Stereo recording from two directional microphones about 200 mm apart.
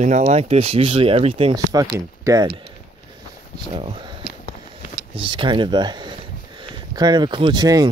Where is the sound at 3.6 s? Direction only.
25° right (ahead or behind).